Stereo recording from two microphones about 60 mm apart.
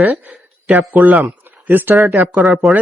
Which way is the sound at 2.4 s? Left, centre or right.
Centre.